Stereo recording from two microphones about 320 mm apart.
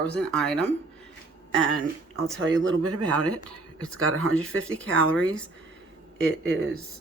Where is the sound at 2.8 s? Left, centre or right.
Right.